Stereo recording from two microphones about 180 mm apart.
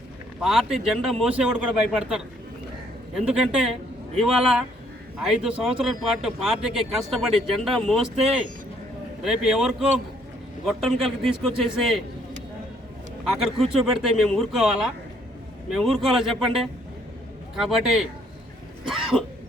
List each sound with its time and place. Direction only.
0.4 s speech: centre (ahead or behind)
8.1 s speech: 35° right (ahead or behind)
9.2 s speech: 5° right (ahead or behind)
13.2 s speech: centre (ahead or behind)